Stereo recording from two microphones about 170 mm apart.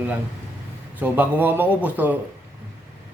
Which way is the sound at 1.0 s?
10° right (ahead or behind).